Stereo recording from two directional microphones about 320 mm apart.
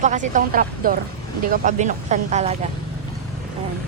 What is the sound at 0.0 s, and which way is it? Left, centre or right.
Speech, right.